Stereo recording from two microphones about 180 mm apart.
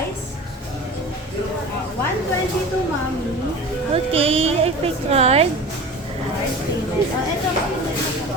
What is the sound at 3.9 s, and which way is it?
A woman's voice, 30° right (ahead or behind).